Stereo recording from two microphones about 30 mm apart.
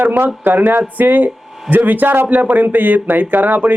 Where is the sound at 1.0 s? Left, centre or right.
Right.